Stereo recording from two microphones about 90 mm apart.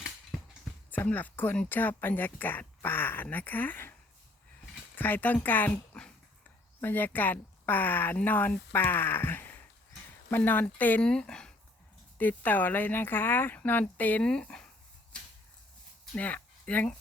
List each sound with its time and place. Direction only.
0.3 s a sound: centre (ahead or behind)
0.9 s speech: 20° left (ahead or behind)
4.9 s speech: 20° left (ahead or behind)
11.0 s speech: 10° left (ahead or behind)
12.1 s speech: 20° left (ahead or behind)
15.1 s a sound: 10° left (ahead or behind)
16.1 s speech: 15° left (ahead or behind)